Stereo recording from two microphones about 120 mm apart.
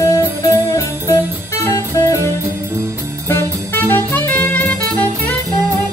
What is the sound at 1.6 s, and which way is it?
Music, 25° left (ahead or behind).